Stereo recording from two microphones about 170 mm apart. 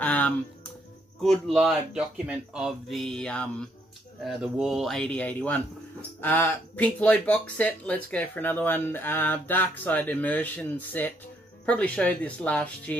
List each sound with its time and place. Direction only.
0.0 s music: 10° left (ahead or behind)
1.2 s speech: centre (ahead or behind)